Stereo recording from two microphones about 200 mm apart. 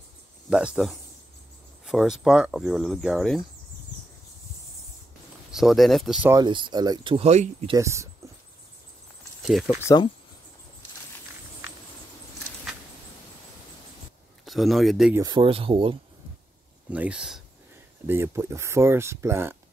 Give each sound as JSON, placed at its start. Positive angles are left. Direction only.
{"t": 0.5, "sound": "speech", "side_deg": -5}
{"t": 5.5, "sound": "speech", "side_deg": 0}
{"t": 6.3, "sound": "speech", "side_deg": -25}
{"t": 7.7, "sound": "speech", "side_deg": -15}
{"t": 9.5, "sound": "speech", "side_deg": 0}
{"t": 14.4, "sound": "speech", "side_deg": 0}
{"t": 15.1, "sound": "speech", "side_deg": -20}
{"t": 16.9, "sound": "speech", "side_deg": -5}